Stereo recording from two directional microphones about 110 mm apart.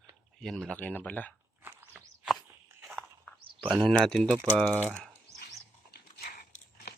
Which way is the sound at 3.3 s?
10° left (ahead or behind).